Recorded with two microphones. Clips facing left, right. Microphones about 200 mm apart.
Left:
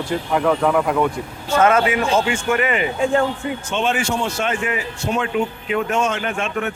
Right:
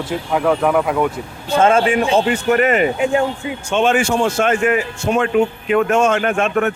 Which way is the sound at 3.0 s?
15° right (ahead or behind).